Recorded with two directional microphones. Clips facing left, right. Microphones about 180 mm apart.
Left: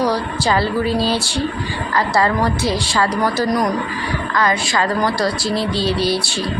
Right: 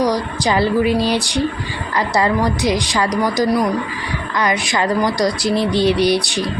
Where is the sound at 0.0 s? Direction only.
15° right (ahead or behind).